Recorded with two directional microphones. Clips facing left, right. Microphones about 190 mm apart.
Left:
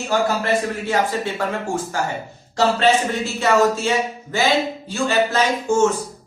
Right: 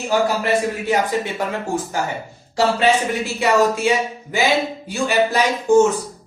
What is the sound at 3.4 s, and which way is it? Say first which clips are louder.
A woman's voice: right 1 dB; 15° right (ahead or behind).